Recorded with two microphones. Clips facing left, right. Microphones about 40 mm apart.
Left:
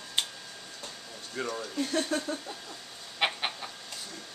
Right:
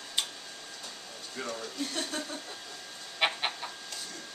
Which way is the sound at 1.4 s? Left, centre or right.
Centre.